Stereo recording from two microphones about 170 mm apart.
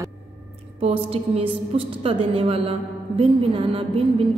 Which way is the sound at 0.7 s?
35° right (ahead or behind).